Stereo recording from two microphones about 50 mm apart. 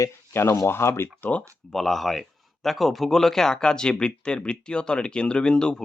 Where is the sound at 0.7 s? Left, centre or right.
Left.